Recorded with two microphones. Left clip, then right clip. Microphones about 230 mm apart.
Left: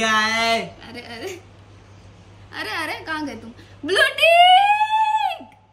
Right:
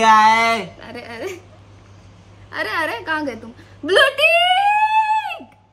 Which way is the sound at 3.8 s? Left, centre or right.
Centre.